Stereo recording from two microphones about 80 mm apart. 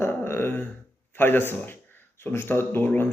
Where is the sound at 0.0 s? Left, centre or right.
Left.